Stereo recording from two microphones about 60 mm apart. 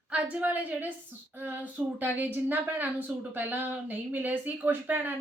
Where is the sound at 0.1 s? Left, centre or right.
Right.